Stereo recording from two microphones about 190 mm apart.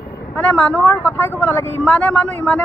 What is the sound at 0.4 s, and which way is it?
A man's voice, 5° left (ahead or behind).